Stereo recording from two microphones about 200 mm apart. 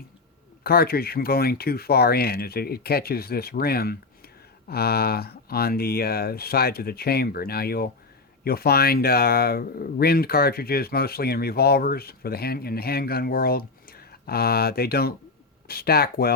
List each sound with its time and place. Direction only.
0.6 s speech: 50° left (ahead or behind)